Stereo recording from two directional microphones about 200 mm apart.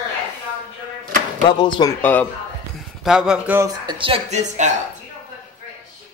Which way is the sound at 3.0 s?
5° right (ahead or behind).